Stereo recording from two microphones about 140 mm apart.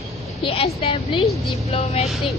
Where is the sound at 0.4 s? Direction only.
45° left (ahead or behind).